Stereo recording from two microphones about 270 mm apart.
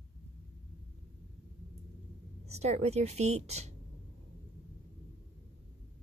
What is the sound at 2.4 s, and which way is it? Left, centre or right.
Speech, right.